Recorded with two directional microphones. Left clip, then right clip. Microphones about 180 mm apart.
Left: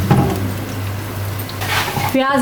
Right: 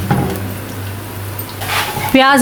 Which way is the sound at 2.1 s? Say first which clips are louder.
Right 8 dB; 55° right (ahead or behind).